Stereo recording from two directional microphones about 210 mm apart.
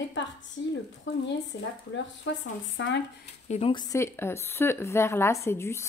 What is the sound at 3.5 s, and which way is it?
A woman's voice, 25° left (ahead or behind).